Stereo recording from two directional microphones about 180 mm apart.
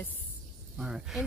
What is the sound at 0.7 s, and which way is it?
Speech, 5° right (ahead or behind).